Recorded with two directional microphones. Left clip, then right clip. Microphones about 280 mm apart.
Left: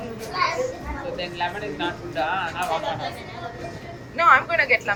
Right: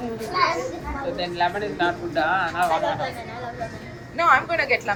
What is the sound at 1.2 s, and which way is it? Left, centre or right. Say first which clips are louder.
Speech: right 5 dB; right.